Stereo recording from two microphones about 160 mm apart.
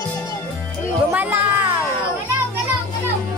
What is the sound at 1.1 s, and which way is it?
Speech, 10° right (ahead or behind).